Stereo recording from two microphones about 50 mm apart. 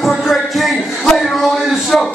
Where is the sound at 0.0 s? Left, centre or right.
Centre.